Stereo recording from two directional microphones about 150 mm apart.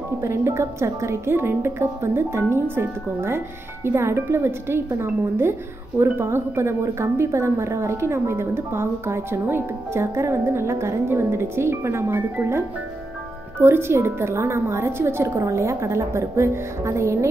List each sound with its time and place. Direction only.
0.2 s speech: 15° right (ahead or behind)